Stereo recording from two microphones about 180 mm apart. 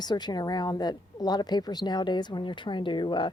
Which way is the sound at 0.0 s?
25° left (ahead or behind).